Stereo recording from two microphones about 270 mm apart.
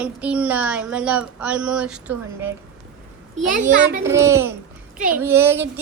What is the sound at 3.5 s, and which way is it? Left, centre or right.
Speech, right.